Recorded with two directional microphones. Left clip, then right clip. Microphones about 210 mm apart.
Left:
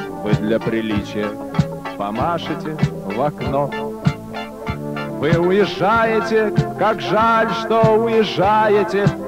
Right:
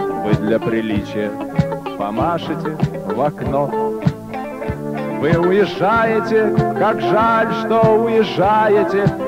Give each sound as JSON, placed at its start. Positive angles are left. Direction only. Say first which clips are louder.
{"t": 0.2, "sound": "speech", "louder": "left 2 dB", "side_deg": -30}
{"t": 5.2, "sound": "speech", "louder": "right 1 dB", "side_deg": -25}